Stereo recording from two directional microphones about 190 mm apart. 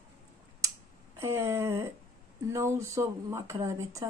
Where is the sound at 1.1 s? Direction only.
15° right (ahead or behind).